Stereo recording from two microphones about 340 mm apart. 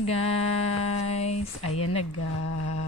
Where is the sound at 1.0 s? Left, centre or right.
Centre.